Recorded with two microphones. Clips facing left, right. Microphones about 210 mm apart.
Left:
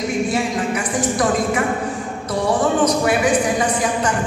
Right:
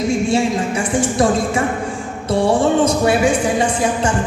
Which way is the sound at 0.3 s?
25° right (ahead or behind).